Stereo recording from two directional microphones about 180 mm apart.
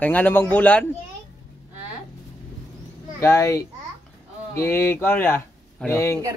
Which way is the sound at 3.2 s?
15° left (ahead or behind).